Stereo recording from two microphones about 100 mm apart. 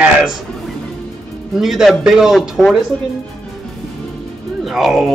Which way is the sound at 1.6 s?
5° right (ahead or behind).